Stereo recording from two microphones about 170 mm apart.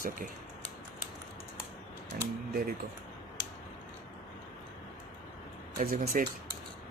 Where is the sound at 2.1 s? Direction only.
65° right (ahead or behind).